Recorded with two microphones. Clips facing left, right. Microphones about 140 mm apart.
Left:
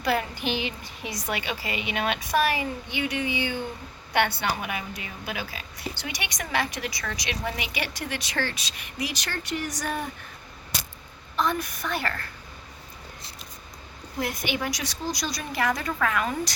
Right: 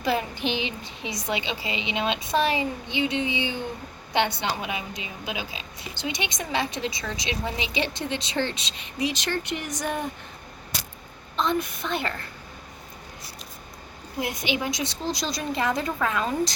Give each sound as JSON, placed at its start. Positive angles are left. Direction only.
{"t": 0.0, "sound": "speech", "side_deg": -20}
{"t": 11.3, "sound": "speech", "side_deg": -25}
{"t": 14.5, "sound": "speech", "side_deg": -20}